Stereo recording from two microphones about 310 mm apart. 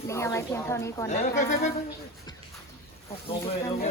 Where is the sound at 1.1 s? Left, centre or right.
Left.